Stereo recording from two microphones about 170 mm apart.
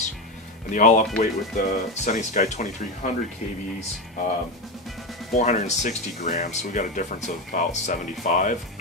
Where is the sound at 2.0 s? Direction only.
45° left (ahead or behind).